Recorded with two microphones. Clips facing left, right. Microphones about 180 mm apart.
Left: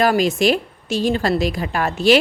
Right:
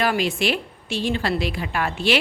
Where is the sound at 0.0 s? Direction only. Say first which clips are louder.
Left 6 dB; 40° left (ahead or behind).